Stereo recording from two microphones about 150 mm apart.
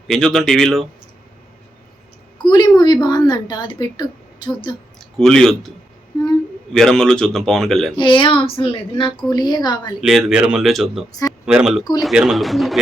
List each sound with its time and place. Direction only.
0.1 s speech: 5° left (ahead or behind)
2.4 s speech: 30° left (ahead or behind)
4.9 s speech: 5° left (ahead or behind)
6.7 s speech: 5° left (ahead or behind)
7.9 s speech: 35° left (ahead or behind)
9.1 s speech: 30° left (ahead or behind)
10.0 s speech: centre (ahead or behind)